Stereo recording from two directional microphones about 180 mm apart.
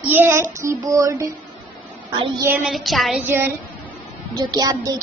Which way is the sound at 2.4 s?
5° right (ahead or behind).